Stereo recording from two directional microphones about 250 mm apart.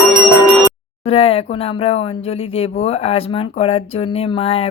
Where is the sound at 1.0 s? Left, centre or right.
Left.